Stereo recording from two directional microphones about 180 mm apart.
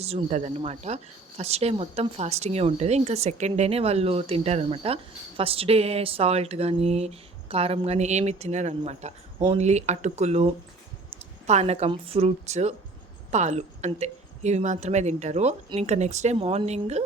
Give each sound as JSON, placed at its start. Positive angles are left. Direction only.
{"t": 0.0, "sound": "speech", "side_deg": -35}